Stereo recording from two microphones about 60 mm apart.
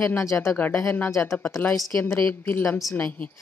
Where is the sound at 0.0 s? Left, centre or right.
Left.